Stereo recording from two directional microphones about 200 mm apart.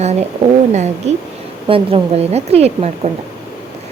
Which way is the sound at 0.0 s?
30° right (ahead or behind).